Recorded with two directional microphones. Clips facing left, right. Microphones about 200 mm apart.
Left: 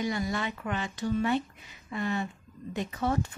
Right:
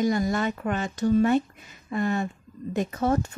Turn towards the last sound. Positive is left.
turn(degrees=-45)  # may be behind; listen again after turning